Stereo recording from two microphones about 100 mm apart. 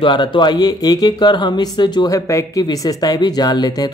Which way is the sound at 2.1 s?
35° left (ahead or behind).